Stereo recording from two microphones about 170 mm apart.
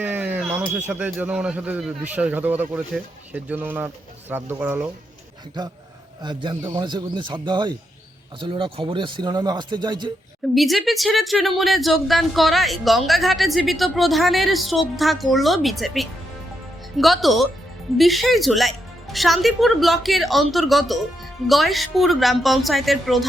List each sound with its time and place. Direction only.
0.0 s a sound: 10° right (ahead or behind)
0.9 s speech: 10° right (ahead or behind)
6.2 s speech: 25° right (ahead or behind)
10.5 s speech: centre (ahead or behind)